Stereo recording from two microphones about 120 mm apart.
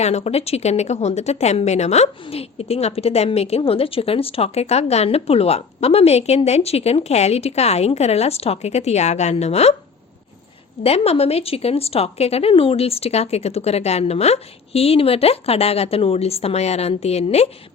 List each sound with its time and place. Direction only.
0.0 s a woman's voice: 65° left (ahead or behind)
2.2 s a woman's voice: 55° left (ahead or behind)
10.8 s a woman's voice: 55° left (ahead or behind)